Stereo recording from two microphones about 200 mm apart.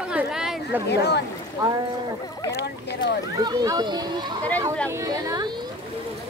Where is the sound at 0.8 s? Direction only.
55° left (ahead or behind).